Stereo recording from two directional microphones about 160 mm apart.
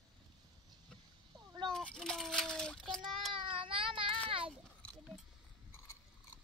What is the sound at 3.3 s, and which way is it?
Baby cry, 35° right (ahead or behind).